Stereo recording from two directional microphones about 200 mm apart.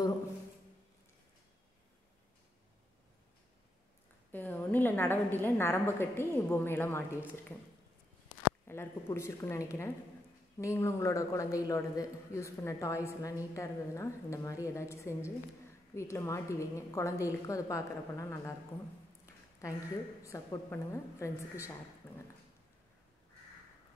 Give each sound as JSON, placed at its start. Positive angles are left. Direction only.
{"t": 4.3, "sound": "a man's voice", "side_deg": 10}
{"t": 8.6, "sound": "a man's voice", "side_deg": 10}
{"t": 20.2, "sound": "a man's voice", "side_deg": 15}